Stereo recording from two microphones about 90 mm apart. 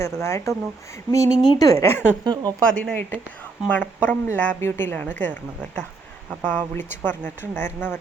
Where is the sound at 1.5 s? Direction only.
40° left (ahead or behind).